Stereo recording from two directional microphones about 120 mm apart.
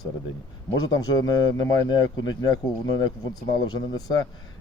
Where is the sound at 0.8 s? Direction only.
35° left (ahead or behind).